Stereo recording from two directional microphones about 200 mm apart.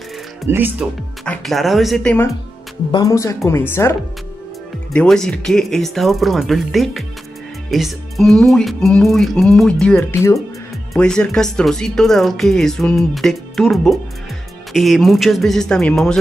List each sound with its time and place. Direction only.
0.5 s speech: 10° right (ahead or behind)
1.2 s speech: 5° left (ahead or behind)
2.9 s speech: 15° left (ahead or behind)
4.9 s speech: 5° left (ahead or behind)